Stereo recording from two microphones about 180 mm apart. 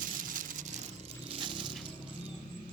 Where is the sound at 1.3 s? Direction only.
25° right (ahead or behind).